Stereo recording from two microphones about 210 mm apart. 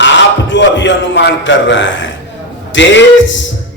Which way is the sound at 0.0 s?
60° left (ahead or behind).